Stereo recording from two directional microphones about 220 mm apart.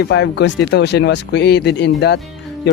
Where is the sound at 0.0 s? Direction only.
50° left (ahead or behind).